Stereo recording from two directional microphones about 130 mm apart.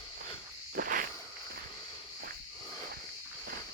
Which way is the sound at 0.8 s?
90° right.